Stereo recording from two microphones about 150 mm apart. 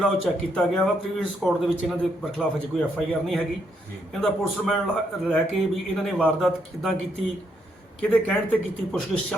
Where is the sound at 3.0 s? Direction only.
Centre (ahead or behind).